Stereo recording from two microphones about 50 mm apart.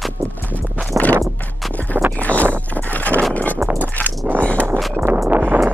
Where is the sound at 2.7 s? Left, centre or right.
Left.